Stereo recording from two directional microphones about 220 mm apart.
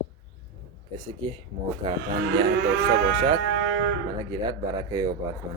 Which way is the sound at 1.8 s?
20° right (ahead or behind).